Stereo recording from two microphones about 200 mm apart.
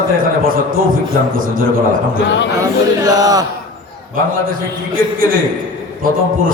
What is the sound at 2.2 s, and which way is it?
Speech, 65° left (ahead or behind).